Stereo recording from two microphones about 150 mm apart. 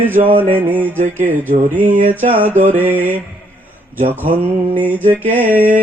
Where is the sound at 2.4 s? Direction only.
15° right (ahead or behind).